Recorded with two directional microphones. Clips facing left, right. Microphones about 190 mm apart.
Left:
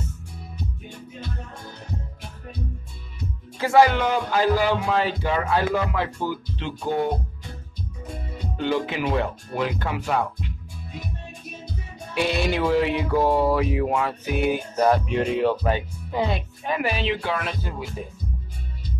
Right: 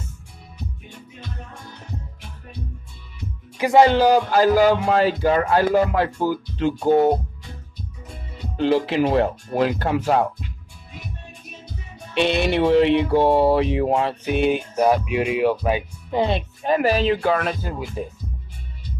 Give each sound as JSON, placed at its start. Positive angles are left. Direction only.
{"t": 3.5, "sound": "speech", "side_deg": -20}
{"t": 3.9, "sound": "speech", "side_deg": -35}
{"t": 8.5, "sound": "speech", "side_deg": -30}
{"t": 12.1, "sound": "speech", "side_deg": -25}
{"t": 14.8, "sound": "speech", "side_deg": -10}
{"t": 16.1, "sound": "speech", "side_deg": -25}